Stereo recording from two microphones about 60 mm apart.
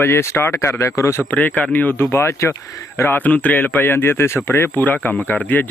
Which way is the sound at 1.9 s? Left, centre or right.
Left.